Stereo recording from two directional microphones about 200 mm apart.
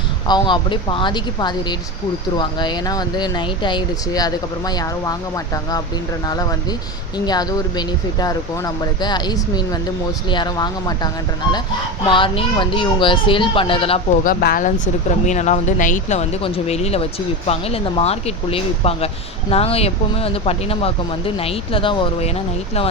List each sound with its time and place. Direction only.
0.3 s speech: 20° left (ahead or behind)
6.2 s speech: 20° left (ahead or behind)
14.3 s speech: 45° left (ahead or behind); by 22.3 s 25° left (ahead or behind)